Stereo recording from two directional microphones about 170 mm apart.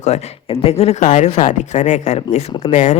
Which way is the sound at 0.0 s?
40° left (ahead or behind).